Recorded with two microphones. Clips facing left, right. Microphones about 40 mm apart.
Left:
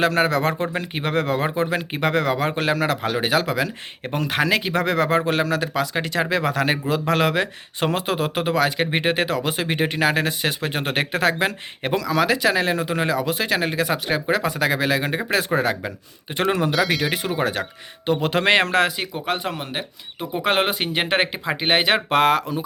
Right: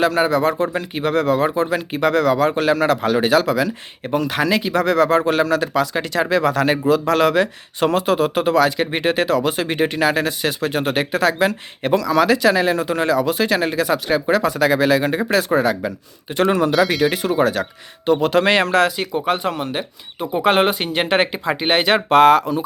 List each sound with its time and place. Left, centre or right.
0.0 s speech: left
0.6 s speech: left
2.7 s speech: centre; by 4.1 s left
4.1 s speech: left
5.2 s speech: centre
9.9 s speech: left
11.9 s speech: centre
15.3 s speech: left
16.4 s speech: centre
16.7 s speech: centre
17.1 s speech: centre
19.1 s speech: centre